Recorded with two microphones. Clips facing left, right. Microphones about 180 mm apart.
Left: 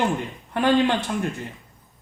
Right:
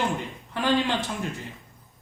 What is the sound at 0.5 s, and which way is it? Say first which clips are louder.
Speech: left 5 dB; 55° left (ahead or behind).